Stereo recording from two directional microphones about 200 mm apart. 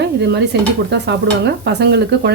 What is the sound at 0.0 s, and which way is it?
Stir, 60° right (ahead or behind).